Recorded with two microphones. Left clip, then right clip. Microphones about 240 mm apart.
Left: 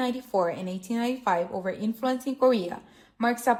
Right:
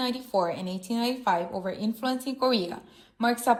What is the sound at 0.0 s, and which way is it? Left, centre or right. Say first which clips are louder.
A woman's voice: left 1 dB; centre.